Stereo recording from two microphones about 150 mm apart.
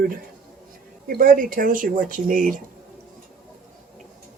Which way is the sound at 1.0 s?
70° right (ahead or behind).